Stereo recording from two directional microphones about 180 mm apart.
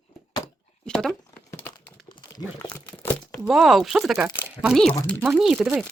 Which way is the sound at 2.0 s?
25° left (ahead or behind).